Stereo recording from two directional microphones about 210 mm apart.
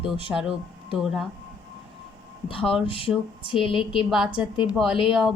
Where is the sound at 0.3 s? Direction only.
5° right (ahead or behind).